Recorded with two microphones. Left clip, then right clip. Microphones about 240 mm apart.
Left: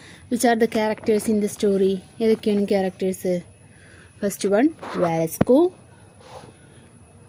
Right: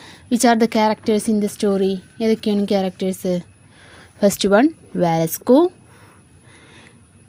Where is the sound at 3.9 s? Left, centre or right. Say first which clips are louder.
Right 10 dB; right.